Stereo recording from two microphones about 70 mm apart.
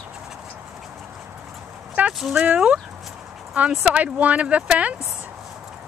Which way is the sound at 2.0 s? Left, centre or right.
Right.